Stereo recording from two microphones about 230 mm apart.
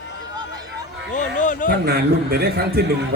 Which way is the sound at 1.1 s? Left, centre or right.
Left.